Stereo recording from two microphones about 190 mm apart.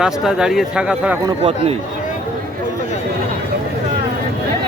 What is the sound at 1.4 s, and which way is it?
Speech, 30° right (ahead or behind).